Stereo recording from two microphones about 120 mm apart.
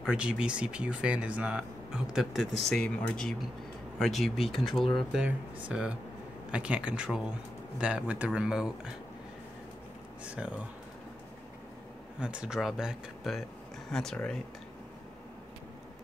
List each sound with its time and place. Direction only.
0.0 s speech: 10° right (ahead or behind)
10.2 s speech: 10° right (ahead or behind)
12.2 s speech: 5° right (ahead or behind)